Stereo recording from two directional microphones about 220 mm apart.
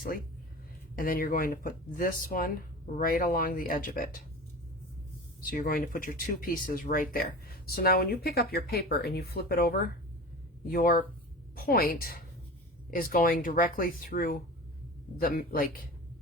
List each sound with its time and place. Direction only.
0.9 s speech: 40° left (ahead or behind)
5.4 s speech: 40° left (ahead or behind)